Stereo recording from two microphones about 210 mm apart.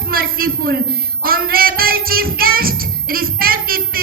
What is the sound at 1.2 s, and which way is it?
Speech, 45° right (ahead or behind).